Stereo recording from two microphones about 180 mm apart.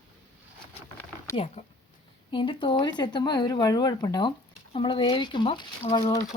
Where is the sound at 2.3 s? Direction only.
25° left (ahead or behind).